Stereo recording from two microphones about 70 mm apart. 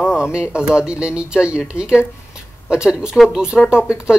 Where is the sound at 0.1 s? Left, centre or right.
Centre.